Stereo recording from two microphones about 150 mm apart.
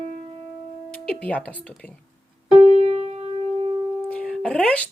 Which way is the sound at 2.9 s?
40° right (ahead or behind).